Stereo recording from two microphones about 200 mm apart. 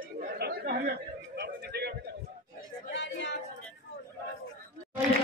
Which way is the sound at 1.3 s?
55° right (ahead or behind).